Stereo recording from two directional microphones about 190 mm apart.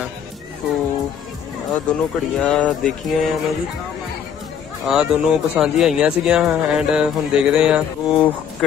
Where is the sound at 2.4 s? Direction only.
5° left (ahead or behind).